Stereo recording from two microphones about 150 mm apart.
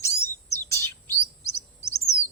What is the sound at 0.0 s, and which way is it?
Chirp, 20° left (ahead or behind).